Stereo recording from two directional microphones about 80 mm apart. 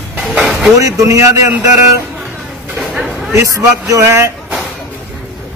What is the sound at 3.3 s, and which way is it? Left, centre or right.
Speech, right.